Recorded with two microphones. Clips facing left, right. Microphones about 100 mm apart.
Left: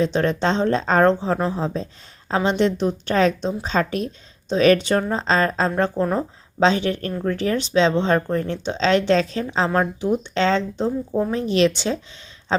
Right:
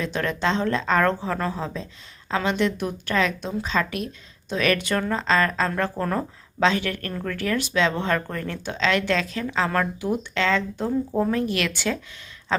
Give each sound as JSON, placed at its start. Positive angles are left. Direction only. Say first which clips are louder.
{"t": 0.0, "sound": "speech", "louder": "left 5 dB", "side_deg": 30}
{"t": 1.6, "sound": "speech", "louder": "left 6 dB", "side_deg": 35}
{"t": 6.0, "sound": "speech", "louder": "left 3 dB", "side_deg": 20}
{"t": 6.6, "sound": "speech", "louder": "left 4 dB", "side_deg": 30}